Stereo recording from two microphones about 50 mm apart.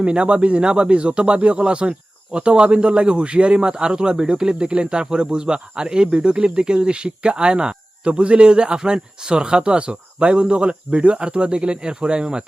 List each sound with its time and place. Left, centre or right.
0.0 s speech: right